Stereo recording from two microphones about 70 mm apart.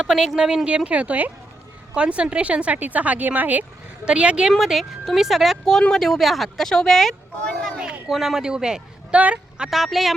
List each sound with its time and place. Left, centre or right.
0.0 s a man's voice: centre
4.5 s speech: centre
7.6 s a sound: centre
8.1 s a man's voice: centre
9.6 s speech: centre